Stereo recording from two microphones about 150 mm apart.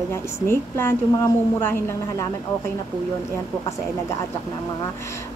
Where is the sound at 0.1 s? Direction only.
15° left (ahead or behind).